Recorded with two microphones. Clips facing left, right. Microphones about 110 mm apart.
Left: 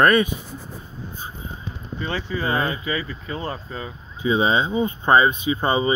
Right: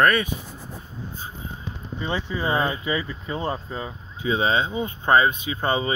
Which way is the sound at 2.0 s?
20° right (ahead or behind).